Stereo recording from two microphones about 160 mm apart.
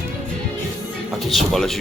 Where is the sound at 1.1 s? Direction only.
Centre (ahead or behind).